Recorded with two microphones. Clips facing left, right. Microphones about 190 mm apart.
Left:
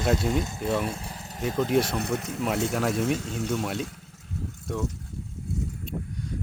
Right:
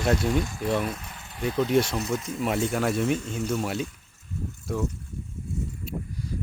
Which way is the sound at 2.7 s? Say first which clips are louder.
Right 1 dB; centre (ahead or behind).